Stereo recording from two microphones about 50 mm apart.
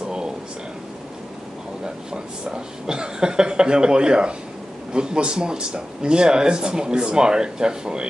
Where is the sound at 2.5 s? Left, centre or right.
Centre.